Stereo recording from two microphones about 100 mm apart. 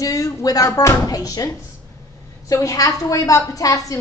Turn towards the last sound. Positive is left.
turn(degrees=35)  # may be behind; listen again after turning